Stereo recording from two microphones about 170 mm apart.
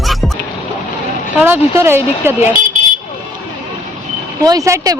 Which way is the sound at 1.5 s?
15° right (ahead or behind).